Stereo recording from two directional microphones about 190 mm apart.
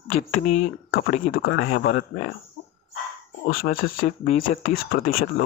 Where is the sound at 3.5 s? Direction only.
50° left (ahead or behind).